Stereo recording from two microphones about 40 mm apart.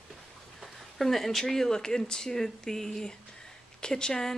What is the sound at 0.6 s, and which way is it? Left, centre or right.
Speech, centre.